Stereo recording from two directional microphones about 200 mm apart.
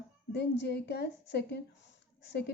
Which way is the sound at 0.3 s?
55° left (ahead or behind).